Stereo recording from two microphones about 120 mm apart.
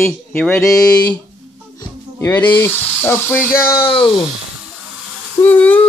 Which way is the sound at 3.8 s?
45° left (ahead or behind).